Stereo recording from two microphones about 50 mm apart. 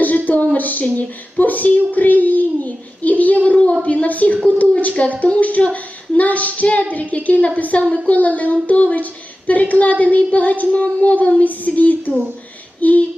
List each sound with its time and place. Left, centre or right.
0.5 s child singing: left
3.8 s a sound: left
5.4 s a woman's voice: left